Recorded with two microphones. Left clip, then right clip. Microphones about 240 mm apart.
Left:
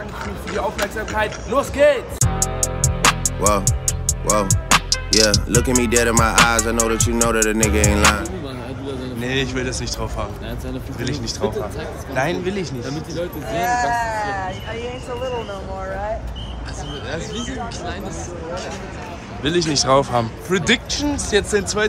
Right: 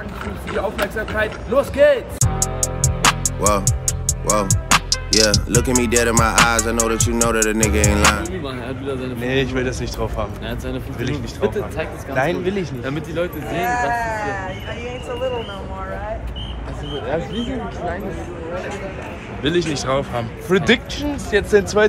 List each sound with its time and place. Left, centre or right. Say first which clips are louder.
0.5 s speech: right 1 dB; centre
12.2 s speech: right 2 dB; centre
13.7 s speech: left 1 dB; left
19.4 s speech: left 1 dB; centre
20.4 s speech: right 5 dB; centre
20.9 s speech: left 1 dB; centre